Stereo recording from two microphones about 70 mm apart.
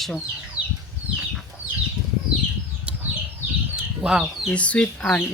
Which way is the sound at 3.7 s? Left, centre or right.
Centre.